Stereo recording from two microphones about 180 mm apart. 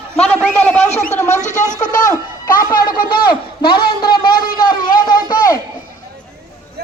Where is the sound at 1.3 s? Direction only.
40° left (ahead or behind).